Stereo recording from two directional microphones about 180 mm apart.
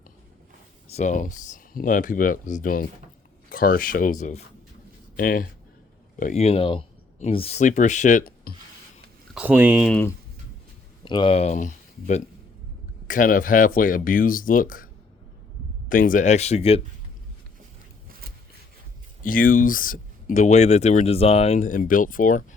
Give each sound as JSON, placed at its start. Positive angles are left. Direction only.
{"t": 0.9, "sound": "speech", "side_deg": 40}
{"t": 9.3, "sound": "speech", "side_deg": -10}
{"t": 11.0, "sound": "speech", "side_deg": 25}
{"t": 15.9, "sound": "speech", "side_deg": 50}
{"t": 19.2, "sound": "speech", "side_deg": 50}